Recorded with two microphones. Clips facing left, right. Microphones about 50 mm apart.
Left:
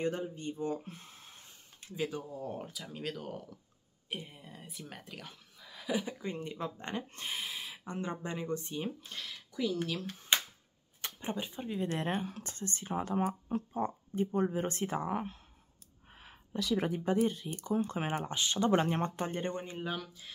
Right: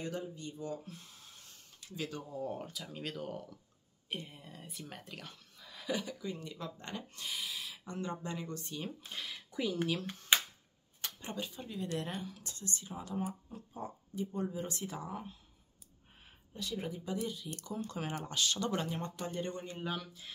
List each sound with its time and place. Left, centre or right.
0.0 s speech: left
2.0 s speech: centre
2.3 s speech: centre
6.0 s speech: left
9.1 s speech: centre
11.1 s speech: left
16.5 s speech: left
17.6 s speech: left
19.8 s speech: centre